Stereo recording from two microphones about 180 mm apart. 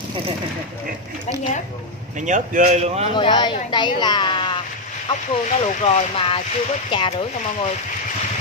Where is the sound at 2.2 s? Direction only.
45° right (ahead or behind).